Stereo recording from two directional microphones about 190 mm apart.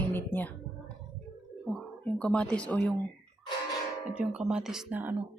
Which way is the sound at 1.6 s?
Centre (ahead or behind).